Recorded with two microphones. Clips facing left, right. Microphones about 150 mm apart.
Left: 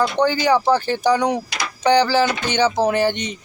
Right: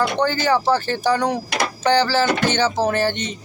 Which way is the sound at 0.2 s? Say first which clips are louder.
Left 2 dB; 10° left (ahead or behind).